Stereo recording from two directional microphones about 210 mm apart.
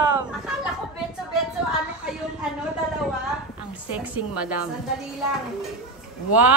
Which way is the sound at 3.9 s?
5° right (ahead or behind).